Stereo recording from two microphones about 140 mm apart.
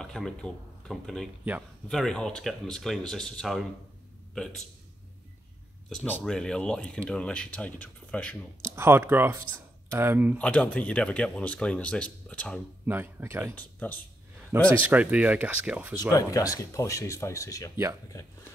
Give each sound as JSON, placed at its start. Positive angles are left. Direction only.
{"t": 0.0, "sound": "speech", "side_deg": 5}
{"t": 6.0, "sound": "speech", "side_deg": 10}
{"t": 8.6, "sound": "speech", "side_deg": -20}
{"t": 10.3, "sound": "speech", "side_deg": 10}
{"t": 12.8, "sound": "speech", "side_deg": -15}
{"t": 13.6, "sound": "speech", "side_deg": 10}
{"t": 14.8, "sound": "speech", "side_deg": -10}
{"t": 16.1, "sound": "speech", "side_deg": 25}